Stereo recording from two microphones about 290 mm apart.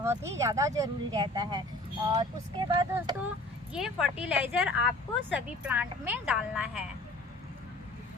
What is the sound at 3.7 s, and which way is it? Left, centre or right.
A woman's voice, centre.